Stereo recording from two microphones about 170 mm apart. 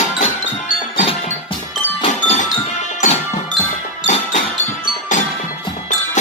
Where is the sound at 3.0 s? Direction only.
50° left (ahead or behind).